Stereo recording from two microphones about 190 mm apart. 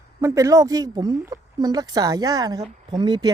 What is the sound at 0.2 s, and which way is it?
Speech, 15° right (ahead or behind).